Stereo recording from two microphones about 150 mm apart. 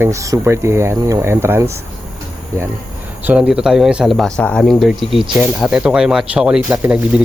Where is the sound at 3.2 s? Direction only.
10° right (ahead or behind).